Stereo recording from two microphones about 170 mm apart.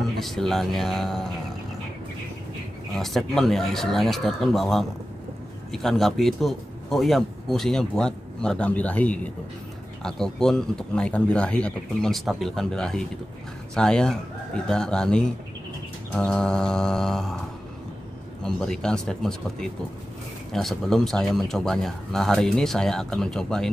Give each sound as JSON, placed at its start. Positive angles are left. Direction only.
{"t": 0.2, "sound": "a man's voice", "side_deg": 0}
{"t": 3.0, "sound": "a man's voice", "side_deg": 0}
{"t": 18.4, "sound": "a man's voice", "side_deg": 5}